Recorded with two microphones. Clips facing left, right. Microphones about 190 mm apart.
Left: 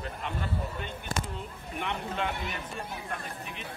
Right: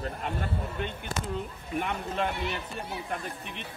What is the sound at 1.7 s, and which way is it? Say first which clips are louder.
Speech: right 3 dB; 45° right (ahead or behind).